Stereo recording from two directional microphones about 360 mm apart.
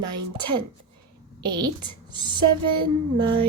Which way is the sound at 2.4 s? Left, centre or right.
Right.